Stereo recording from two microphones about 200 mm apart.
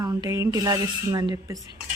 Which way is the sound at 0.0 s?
20° right (ahead or behind).